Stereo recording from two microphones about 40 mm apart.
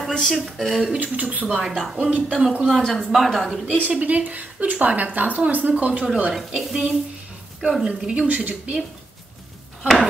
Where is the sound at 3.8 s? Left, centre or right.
Right.